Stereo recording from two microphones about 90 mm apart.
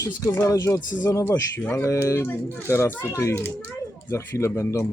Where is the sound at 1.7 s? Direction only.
30° left (ahead or behind).